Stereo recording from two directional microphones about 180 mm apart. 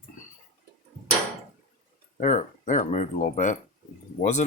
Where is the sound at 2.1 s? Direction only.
40° left (ahead or behind).